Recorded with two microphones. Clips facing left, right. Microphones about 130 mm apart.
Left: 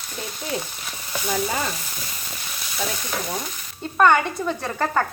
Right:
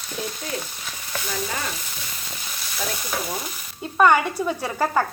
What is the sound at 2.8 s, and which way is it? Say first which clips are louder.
Speech: even; centre (ahead or behind).